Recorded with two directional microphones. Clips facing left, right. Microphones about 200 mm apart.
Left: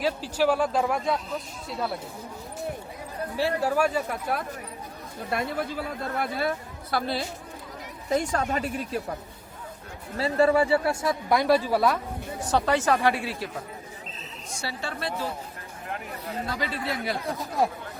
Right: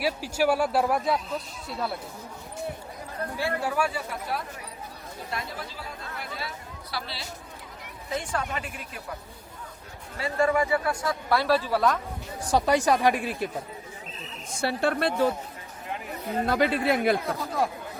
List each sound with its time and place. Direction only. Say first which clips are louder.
0.0 s speech: left 1 dB; 10° right (ahead or behind)
3.3 s speech: left 4 dB; 40° left (ahead or behind)
10.2 s speech: left 3 dB; 35° left (ahead or behind); by 11.9 s 10° left (ahead or behind)
12.4 s speech: right 1 dB; 10° right (ahead or behind)
14.6 s speech: right 8 dB; 55° right (ahead or behind)
16.5 s speech: right 9 dB; 60° right (ahead or behind)